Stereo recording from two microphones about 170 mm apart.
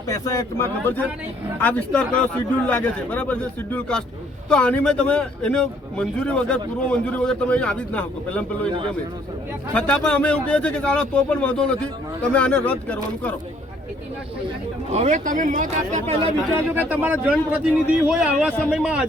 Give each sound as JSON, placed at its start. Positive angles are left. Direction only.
{"t": 0.1, "sound": "a man's voice", "side_deg": 20}
{"t": 9.7, "sound": "a man's voice", "side_deg": 5}
{"t": 14.9, "sound": "speech", "side_deg": -45}
{"t": 16.6, "sound": "speech", "side_deg": -10}